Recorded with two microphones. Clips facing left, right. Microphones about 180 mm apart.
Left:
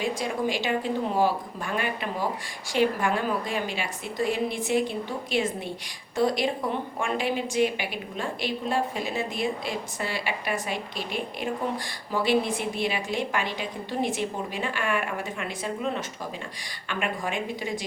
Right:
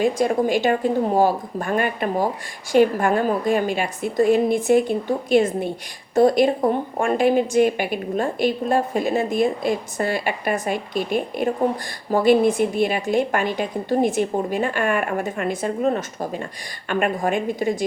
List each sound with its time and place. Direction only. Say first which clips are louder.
0.0 s a woman's voice: right 8 dB; 50° right (ahead or behind)